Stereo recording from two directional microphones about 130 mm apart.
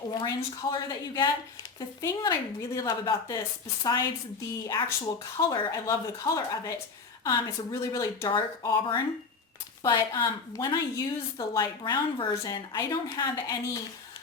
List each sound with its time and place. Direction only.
0.1 s a woman's voice: 35° left (ahead or behind)
8.6 s a woman's voice: 35° left (ahead or behind)
9.8 s a woman's voice: 25° left (ahead or behind)
10.2 s a woman's voice: 35° left (ahead or behind)
10.9 s a woman's voice: 25° left (ahead or behind)